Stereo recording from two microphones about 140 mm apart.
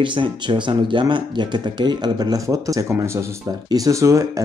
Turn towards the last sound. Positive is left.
turn(degrees=-20)  # may be behind; listen again after turning